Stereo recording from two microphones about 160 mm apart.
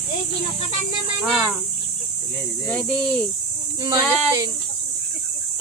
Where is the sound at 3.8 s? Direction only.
25° right (ahead or behind).